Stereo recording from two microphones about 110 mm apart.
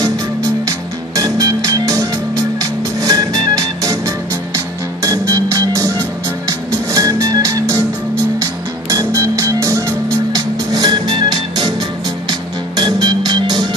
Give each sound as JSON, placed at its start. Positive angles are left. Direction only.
{"t": 0.7, "sound": "music", "side_deg": -35}
{"t": 5.0, "sound": "music", "side_deg": -30}